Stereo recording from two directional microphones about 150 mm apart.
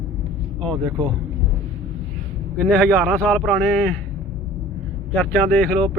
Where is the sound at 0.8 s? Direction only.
25° right (ahead or behind).